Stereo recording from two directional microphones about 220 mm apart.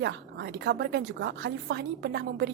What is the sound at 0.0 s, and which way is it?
A woman's voice, 50° right (ahead or behind).